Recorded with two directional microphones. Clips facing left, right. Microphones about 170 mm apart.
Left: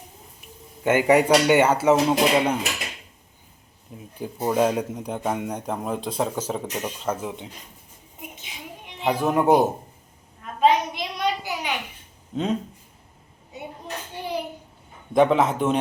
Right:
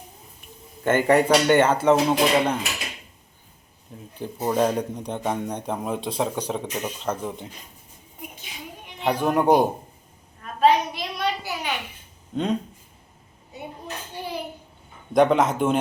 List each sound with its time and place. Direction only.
0.9 s speech: 10° left (ahead or behind)
4.2 s a man's voice: 5° left (ahead or behind)
9.0 s a man's voice: centre (ahead or behind)
10.6 s a sound: 20° left (ahead or behind)
12.3 s speech: 5° left (ahead or behind)
15.1 s a man's voice: centre (ahead or behind)